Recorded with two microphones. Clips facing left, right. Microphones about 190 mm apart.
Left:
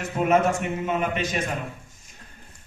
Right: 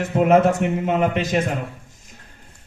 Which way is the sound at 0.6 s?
90° right.